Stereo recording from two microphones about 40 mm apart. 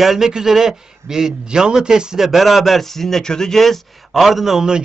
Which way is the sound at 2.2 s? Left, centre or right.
Centre.